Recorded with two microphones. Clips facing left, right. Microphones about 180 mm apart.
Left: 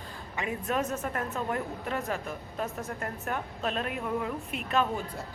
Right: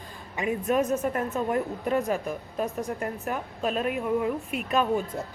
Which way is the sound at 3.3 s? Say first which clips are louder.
Right 2 dB; 5° right (ahead or behind).